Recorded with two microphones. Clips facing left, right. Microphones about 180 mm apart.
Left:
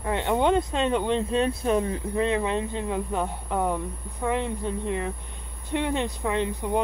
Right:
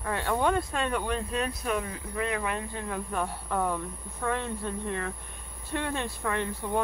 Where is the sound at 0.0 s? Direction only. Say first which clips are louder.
Left 4 dB; 20° left (ahead or behind).